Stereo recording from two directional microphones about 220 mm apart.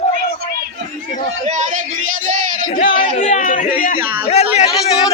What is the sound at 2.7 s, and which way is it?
Speech, 40° left (ahead or behind).